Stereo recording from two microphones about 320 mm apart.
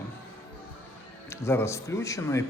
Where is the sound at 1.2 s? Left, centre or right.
Centre.